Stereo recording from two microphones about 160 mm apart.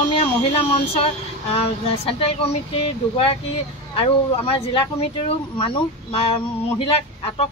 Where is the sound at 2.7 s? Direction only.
40° left (ahead or behind).